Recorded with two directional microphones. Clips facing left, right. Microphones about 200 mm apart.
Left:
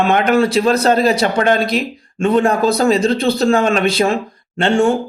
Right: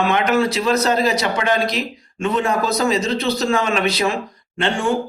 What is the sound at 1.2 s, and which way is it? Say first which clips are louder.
A man's voice: left 5 dB; 45° left (ahead or behind).